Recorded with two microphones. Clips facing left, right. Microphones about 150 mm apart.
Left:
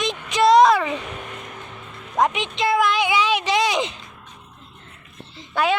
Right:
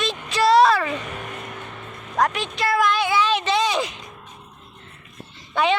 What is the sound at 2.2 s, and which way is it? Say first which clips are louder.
Speech: left 1 dB; 20° left (ahead or behind).